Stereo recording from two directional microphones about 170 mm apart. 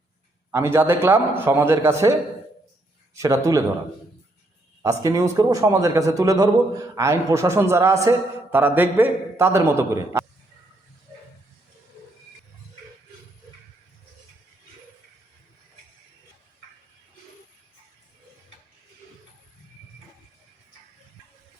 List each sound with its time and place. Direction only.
0.5 s a man's voice: 15° right (ahead or behind)
3.2 s a man's voice: 20° right (ahead or behind)
4.8 s a man's voice: 20° right (ahead or behind)